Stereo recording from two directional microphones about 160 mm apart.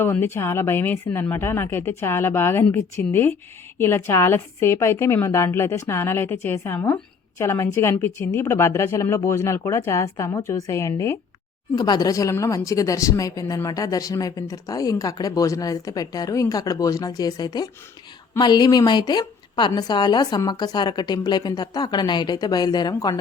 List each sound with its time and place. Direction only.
0.0 s a woman's voice: 15° left (ahead or behind)